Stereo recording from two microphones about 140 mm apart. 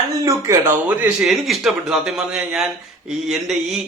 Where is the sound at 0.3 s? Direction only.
20° right (ahead or behind).